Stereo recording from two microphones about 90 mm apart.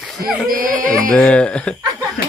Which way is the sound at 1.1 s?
15° left (ahead or behind).